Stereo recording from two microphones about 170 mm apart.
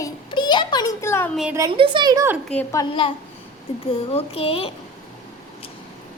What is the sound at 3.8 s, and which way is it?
Speech, 35° left (ahead or behind).